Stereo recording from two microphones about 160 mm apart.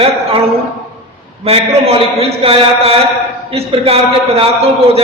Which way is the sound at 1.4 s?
35° right (ahead or behind).